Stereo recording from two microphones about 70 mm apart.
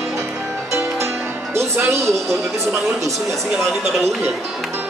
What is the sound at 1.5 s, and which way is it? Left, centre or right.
Music, right.